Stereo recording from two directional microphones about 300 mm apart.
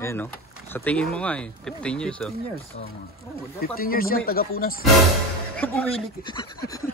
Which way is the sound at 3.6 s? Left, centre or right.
Left.